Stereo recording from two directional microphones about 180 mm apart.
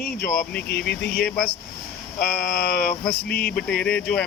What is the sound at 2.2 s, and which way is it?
Speech, 55° left (ahead or behind).